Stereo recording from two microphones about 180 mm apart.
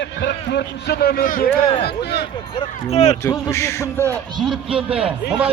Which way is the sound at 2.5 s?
35° left (ahead or behind).